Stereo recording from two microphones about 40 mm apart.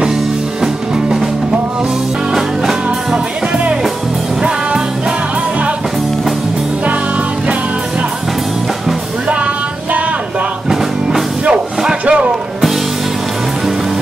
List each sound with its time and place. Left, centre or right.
0.6 s music: centre
2.3 s music: centre
4.4 s music: centre
10.7 s music: centre
12.1 s music: right